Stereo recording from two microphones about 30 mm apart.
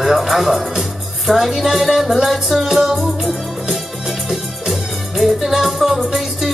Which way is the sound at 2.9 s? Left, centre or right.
Centre.